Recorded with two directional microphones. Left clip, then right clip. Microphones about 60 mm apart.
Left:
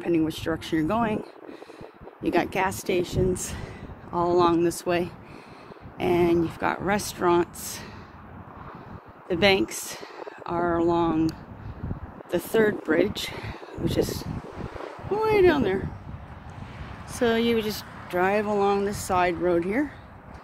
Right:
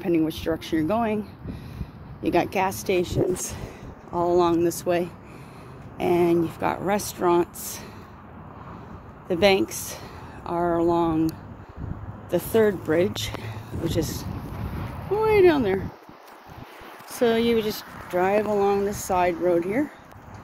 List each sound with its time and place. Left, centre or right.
0.3 s speech: left
0.6 s speech: left
2.2 s speech: left
2.9 s speech: centre
3.4 s a sound: left
4.2 s speech: left
5.9 s speech: left
9.3 s speech: left
12.3 s speech: left
14.6 s a sound: centre
17.1 s speech: centre
18.1 s speech: left
18.9 s speech: centre